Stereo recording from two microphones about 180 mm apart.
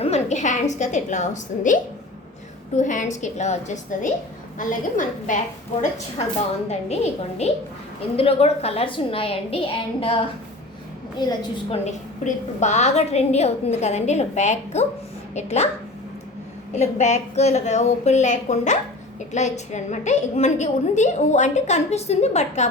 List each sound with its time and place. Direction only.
0.0 s a woman's voice: 40° left (ahead or behind)
6.7 s a woman's voice: 40° left (ahead or behind)
11.2 s a woman's voice: 25° left (ahead or behind)
11.9 s a woman's voice: 40° left (ahead or behind)
16.7 s a woman's voice: 40° left (ahead or behind)